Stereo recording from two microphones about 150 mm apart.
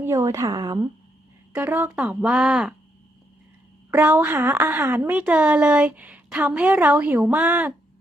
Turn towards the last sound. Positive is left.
turn(degrees=-10)  # may be behind; listen again after turning